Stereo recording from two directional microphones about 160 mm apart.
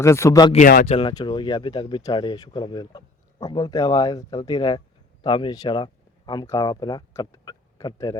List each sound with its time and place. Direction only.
0.0 s speech: 20° left (ahead or behind)
0.9 s speech: 35° left (ahead or behind)